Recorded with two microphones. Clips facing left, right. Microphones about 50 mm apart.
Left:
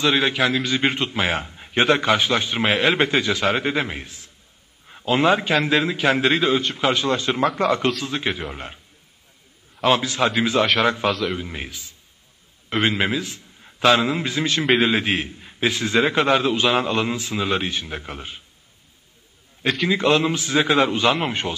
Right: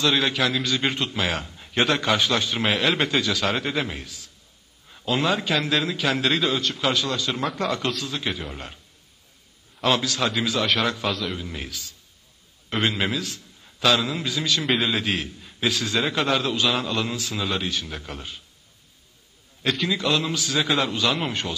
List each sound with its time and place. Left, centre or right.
0.0 s a man's voice: left
11.1 s a man's voice: centre
11.3 s a man's voice: left
19.9 s a man's voice: left